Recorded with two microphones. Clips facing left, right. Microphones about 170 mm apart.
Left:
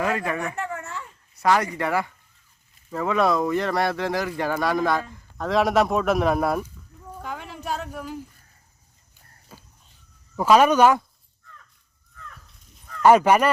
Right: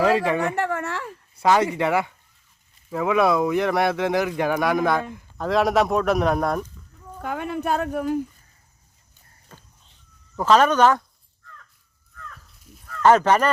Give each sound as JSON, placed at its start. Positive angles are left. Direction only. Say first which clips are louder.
{"t": 0.3, "sound": "speech", "louder": "right 5 dB", "side_deg": -30}
{"t": 0.5, "sound": "a sound", "louder": "right 6 dB", "side_deg": -85}
{"t": 1.5, "sound": "speech", "louder": "right 3 dB", "side_deg": -25}
{"t": 2.9, "sound": "speech", "louder": "right 2 dB", "side_deg": -5}
{"t": 3.5, "sound": "speech", "louder": "right 2 dB", "side_deg": -15}
{"t": 5.4, "sound": "speech", "louder": "right 1 dB", "side_deg": 0}
{"t": 7.2, "sound": "speech", "louder": "right 8 dB", "side_deg": -55}
{"t": 9.5, "sound": "a sound", "louder": "left 1 dB", "side_deg": 5}
{"t": 10.3, "sound": "speech", "louder": "left 1 dB", "side_deg": 10}
{"t": 13.0, "sound": "speech", "louder": "left 1 dB", "side_deg": 10}